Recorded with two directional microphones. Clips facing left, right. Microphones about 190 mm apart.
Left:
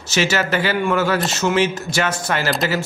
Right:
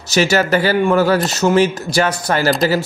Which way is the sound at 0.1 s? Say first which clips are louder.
Right 5 dB; 40° right (ahead or behind).